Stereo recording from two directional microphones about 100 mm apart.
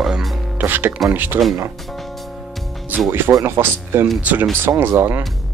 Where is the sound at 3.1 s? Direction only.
25° right (ahead or behind).